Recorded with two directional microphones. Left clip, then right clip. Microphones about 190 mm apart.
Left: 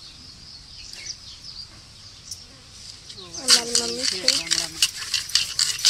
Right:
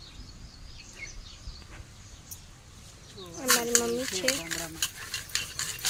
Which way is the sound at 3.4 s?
10° right (ahead or behind).